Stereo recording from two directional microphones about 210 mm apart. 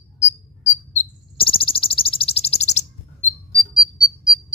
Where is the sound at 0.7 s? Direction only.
30° left (ahead or behind).